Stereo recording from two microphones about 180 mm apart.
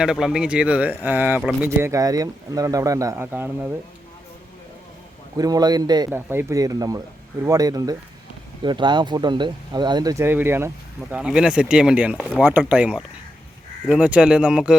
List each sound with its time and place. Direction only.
0.0 s speech: 5° right (ahead or behind)
5.4 s speech: 20° right (ahead or behind)
6.1 s speech: 10° right (ahead or behind)